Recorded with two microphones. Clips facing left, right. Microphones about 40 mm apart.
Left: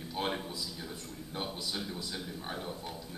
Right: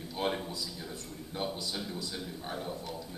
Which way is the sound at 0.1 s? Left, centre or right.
Centre.